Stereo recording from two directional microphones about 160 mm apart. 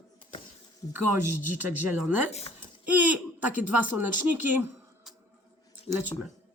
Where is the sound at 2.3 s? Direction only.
40° left (ahead or behind).